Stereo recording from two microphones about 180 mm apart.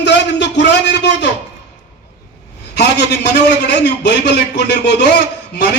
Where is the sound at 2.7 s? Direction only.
70° left (ahead or behind).